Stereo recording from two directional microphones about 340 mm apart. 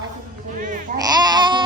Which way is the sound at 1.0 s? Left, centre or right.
Centre.